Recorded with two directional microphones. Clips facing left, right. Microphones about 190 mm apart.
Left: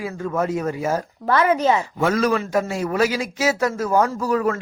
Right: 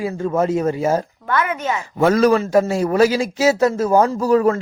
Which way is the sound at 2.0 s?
35° right (ahead or behind).